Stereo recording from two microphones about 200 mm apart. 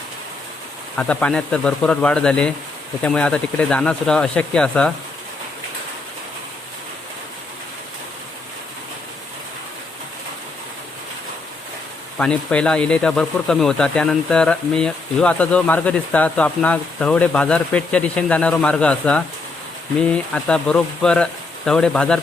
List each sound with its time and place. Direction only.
0.9 s speech: 5° left (ahead or behind)
12.1 s speech: 5° left (ahead or behind)